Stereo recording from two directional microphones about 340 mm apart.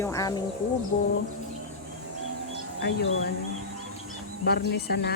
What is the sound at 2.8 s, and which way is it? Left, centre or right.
Speech, left.